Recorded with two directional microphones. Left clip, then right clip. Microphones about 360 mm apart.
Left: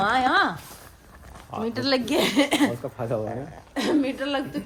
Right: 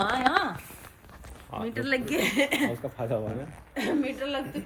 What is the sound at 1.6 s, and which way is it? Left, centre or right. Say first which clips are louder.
Speech: left 4 dB; centre.